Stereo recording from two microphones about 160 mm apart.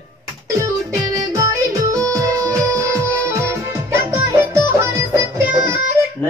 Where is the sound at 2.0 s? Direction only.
20° right (ahead or behind).